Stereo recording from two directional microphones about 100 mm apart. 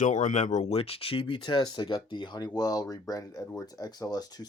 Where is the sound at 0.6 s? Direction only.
80° left.